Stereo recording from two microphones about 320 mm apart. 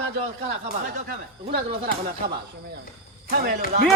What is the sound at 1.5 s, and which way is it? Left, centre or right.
Speech, right.